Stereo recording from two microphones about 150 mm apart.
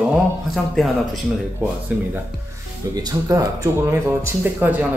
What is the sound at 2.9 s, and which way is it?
Speech, 25° right (ahead or behind).